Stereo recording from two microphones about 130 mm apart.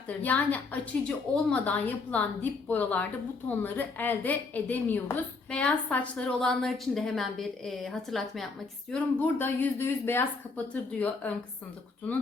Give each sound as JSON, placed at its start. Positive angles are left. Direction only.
{"t": 0.2, "sound": "a woman's voice", "side_deg": 10}
{"t": 8.9, "sound": "a woman's voice", "side_deg": 15}